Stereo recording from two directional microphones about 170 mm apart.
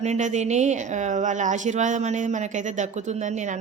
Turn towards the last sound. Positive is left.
turn(degrees=-45)  # may be behind; listen again after turning